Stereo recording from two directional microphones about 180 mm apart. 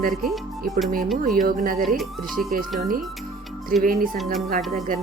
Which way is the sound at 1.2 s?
50° right (ahead or behind).